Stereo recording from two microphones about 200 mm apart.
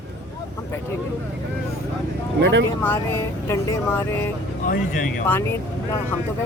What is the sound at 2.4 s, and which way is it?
Speech, 60° right (ahead or behind).